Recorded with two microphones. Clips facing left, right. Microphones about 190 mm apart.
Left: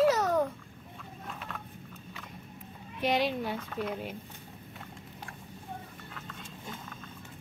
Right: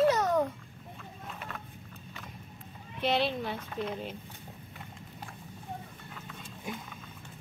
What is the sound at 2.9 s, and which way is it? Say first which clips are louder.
Speech: even; 10° left (ahead or behind).